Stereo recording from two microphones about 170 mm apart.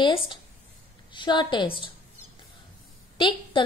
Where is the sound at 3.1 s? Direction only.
30° left (ahead or behind).